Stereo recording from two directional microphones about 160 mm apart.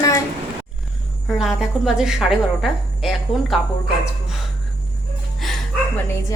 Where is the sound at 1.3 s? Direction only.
5° right (ahead or behind).